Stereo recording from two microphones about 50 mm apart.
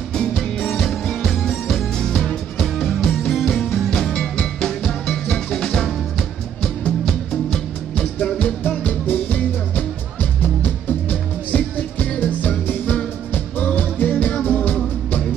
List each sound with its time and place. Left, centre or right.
0.6 s music: centre
7.9 s music: centre
8.5 s music: left